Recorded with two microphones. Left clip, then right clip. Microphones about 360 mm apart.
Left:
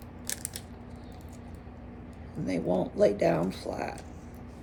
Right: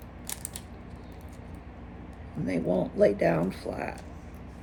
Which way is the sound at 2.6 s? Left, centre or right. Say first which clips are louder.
Right 1 dB; right.